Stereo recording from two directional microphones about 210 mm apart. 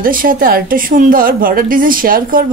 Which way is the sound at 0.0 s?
40° right (ahead or behind).